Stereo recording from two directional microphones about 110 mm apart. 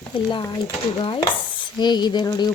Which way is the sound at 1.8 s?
40° left (ahead or behind).